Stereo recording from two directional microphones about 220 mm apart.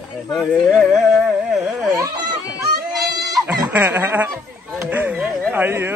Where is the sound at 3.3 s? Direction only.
10° right (ahead or behind).